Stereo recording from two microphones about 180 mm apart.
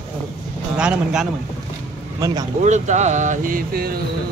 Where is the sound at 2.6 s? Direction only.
40° right (ahead or behind); by 4.0 s 55° right (ahead or behind).